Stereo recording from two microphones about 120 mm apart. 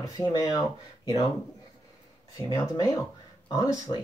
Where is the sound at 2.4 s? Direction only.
30° left (ahead or behind).